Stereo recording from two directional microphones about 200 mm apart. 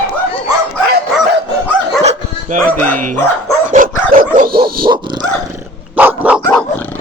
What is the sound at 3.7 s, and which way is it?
Dog, 45° right (ahead or behind).